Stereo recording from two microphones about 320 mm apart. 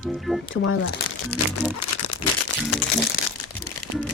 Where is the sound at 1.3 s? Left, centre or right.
Left.